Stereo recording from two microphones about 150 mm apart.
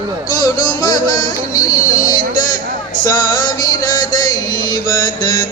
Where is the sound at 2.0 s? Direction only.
65° left (ahead or behind).